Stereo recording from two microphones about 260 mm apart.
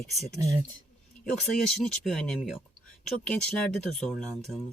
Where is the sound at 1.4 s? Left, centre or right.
Centre.